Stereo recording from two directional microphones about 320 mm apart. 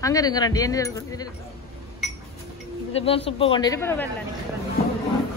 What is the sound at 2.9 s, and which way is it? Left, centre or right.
Speech, centre.